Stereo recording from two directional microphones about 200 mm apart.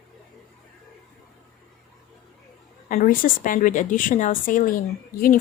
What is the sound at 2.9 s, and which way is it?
A woman's voice, 40° left (ahead or behind).